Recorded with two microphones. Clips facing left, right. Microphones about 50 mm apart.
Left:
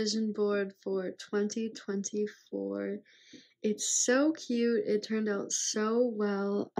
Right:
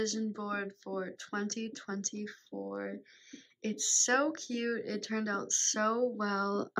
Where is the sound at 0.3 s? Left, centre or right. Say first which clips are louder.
Left 7 dB; right.